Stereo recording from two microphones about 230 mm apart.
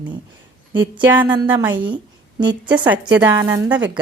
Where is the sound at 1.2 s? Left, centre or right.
Centre.